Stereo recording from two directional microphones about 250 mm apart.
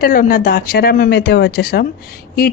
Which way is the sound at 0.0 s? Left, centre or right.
Left.